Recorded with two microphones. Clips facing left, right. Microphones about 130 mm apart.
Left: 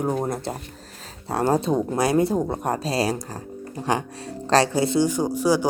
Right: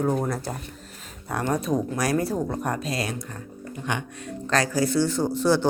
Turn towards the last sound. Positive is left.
turn(degrees=10)  # may be behind; listen again after turning